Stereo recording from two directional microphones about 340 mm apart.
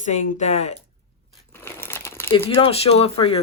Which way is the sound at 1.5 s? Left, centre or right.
Centre.